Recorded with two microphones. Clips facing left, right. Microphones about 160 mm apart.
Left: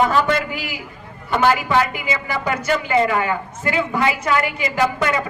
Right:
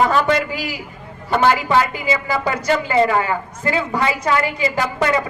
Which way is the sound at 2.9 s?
30° right (ahead or behind).